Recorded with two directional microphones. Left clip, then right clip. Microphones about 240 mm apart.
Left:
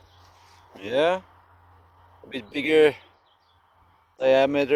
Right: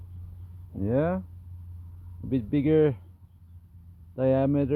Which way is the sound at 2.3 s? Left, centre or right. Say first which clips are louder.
Left 2 dB; centre.